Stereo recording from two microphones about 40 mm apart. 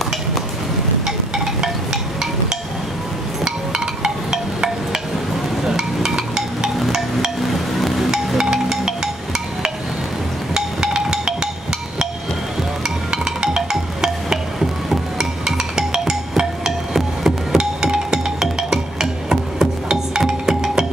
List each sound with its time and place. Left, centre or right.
3.4 s music: centre
5.6 s a sound: centre
6.8 s music: centre
8.4 s music: centre
12.8 s music: centre
17.6 s music: centre